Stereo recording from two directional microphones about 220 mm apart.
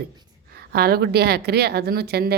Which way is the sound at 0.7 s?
45° right (ahead or behind).